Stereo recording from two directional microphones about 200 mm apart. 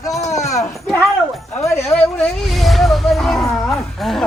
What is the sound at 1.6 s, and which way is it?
A man's voice, 15° left (ahead or behind).